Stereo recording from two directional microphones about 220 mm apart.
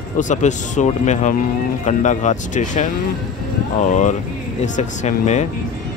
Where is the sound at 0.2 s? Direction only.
35° left (ahead or behind).